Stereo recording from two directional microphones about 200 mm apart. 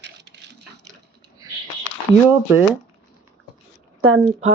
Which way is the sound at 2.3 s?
10° right (ahead or behind).